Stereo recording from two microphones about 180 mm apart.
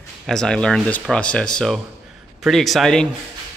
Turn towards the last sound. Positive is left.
turn(degrees=0)  # may be behind; listen again after turning